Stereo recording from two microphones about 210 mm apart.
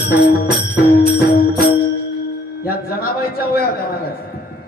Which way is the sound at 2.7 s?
45° left (ahead or behind).